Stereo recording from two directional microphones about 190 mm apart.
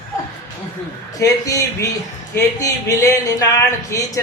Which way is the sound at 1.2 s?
20° left (ahead or behind).